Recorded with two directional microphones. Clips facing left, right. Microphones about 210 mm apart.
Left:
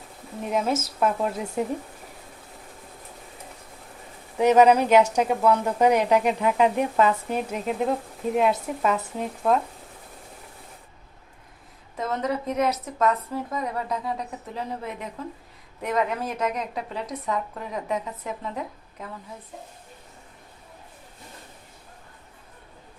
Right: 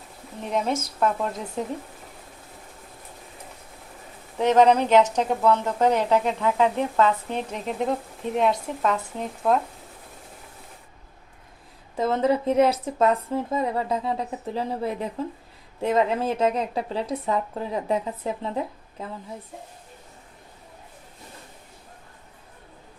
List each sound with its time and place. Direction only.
0.4 s speech: 5° left (ahead or behind)
4.4 s speech: 10° left (ahead or behind)
11.9 s speech: 30° right (ahead or behind)